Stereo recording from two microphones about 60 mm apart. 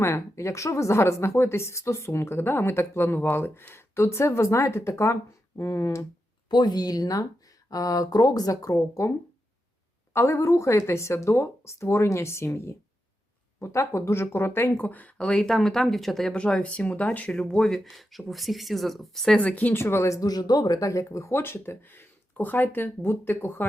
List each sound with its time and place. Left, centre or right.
0.0 s a woman's voice: left
6.7 s speech: left
10.2 s a woman's voice: left
15.3 s speech: centre
16.3 s speech: centre
17.7 s speech: centre
19.4 s speech: left
19.7 s speech: left
21.3 s speech: left